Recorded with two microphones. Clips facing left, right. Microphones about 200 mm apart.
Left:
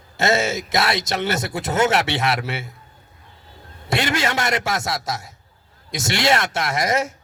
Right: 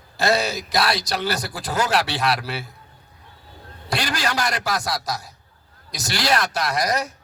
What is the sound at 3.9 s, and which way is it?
Speech, 25° left (ahead or behind).